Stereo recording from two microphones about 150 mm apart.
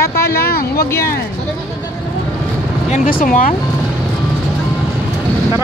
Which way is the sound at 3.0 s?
65° left (ahead or behind).